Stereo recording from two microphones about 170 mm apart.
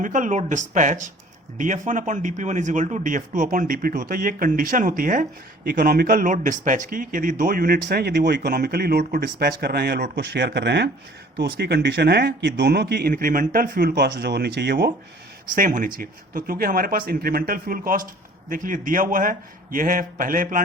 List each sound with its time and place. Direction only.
0.0 s speech: 50° right (ahead or behind); by 14.9 s 75° right (ahead or behind)
15.5 s speech: 55° right (ahead or behind)